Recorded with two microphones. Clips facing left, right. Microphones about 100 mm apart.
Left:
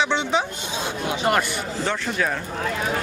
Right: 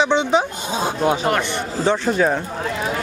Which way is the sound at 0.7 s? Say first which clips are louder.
Right 8 dB; 40° right (ahead or behind).